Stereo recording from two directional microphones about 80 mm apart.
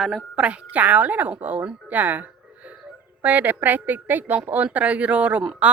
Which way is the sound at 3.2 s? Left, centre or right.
Right.